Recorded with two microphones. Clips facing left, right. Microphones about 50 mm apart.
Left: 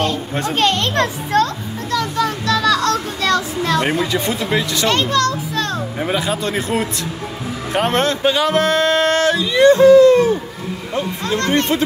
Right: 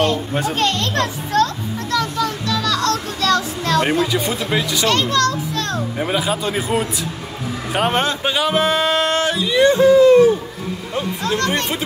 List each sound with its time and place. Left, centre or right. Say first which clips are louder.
0.6 s a child's voice: left 5 dB; left
1.9 s a sound: left 2 dB; centre
3.2 s speech: left 1 dB; centre
4.1 s speech: left 1 dB; centre
4.8 s a child's voice: even; left
5.9 s speech: even; centre
9.1 s speech: left 2 dB; right
11.3 s a child's voice: left 4 dB; left